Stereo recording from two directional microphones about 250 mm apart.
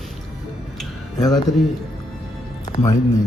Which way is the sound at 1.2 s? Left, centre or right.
Centre.